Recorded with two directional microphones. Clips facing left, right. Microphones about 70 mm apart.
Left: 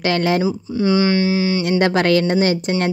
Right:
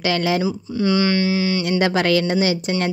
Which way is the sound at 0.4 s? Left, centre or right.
Left.